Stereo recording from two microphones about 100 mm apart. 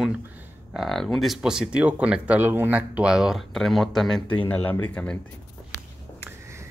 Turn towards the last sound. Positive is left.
turn(degrees=15)  # may be behind; listen again after turning